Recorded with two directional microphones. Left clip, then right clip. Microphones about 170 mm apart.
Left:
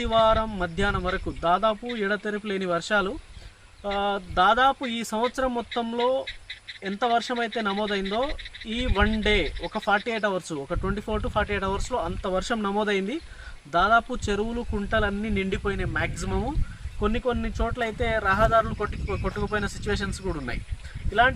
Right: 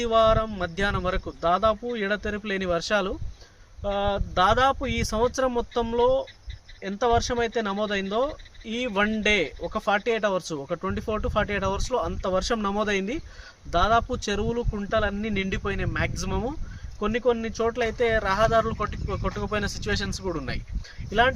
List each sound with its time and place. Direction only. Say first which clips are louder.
0.0 s speech: right 1 dB; 20° right (ahead or behind)
9.2 s speech: right 1 dB; 20° right (ahead or behind)